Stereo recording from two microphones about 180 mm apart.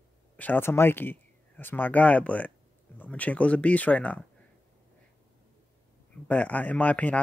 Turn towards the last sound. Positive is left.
turn(degrees=10)  # may be behind; listen again after turning